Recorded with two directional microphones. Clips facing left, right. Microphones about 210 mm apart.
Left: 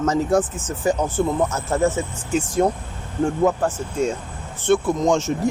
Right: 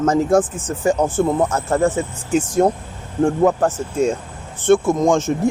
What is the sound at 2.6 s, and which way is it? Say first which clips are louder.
Speech: right 3 dB; 45° right (ahead or behind).